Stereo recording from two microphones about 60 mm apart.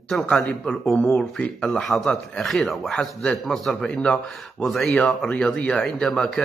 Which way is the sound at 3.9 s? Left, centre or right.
Centre.